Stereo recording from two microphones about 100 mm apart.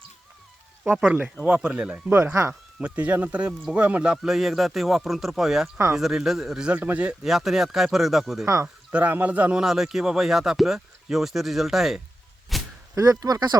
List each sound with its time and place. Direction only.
0.9 s speech: 15° right (ahead or behind)
2.0 s speech: 25° right (ahead or behind)
2.5 s speech: 15° right (ahead or behind)
8.6 s speech: 15° right (ahead or behind)
12.5 s a sound: centre (ahead or behind)
13.0 s speech: 35° right (ahead or behind)